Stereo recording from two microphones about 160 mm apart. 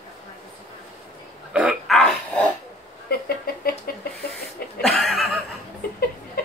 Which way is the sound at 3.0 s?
70° left (ahead or behind).